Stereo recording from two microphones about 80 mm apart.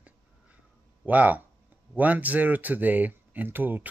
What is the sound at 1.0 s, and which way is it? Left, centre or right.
Speech, centre.